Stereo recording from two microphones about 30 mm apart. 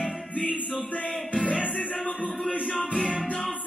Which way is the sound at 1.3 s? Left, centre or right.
Left.